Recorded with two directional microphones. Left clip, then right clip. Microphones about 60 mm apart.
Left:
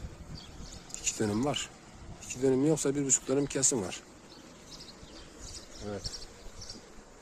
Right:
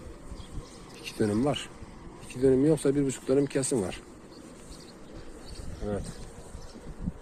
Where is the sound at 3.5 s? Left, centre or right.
Left.